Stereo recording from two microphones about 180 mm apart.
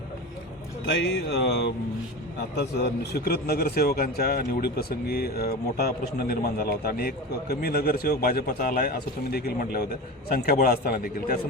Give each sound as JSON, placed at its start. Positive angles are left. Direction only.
{"t": 0.9, "sound": "a man's voice", "side_deg": 70}